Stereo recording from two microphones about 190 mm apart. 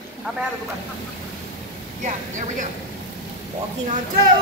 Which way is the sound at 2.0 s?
40° right (ahead or behind).